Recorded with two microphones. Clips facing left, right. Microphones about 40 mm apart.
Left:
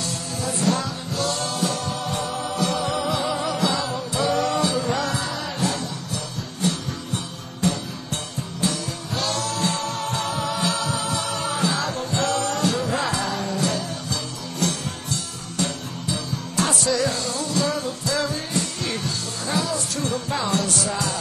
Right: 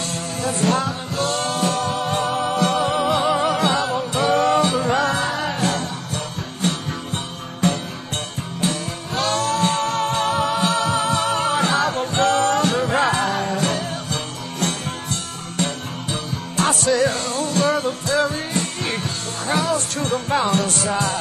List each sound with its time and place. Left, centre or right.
0.0 s music: right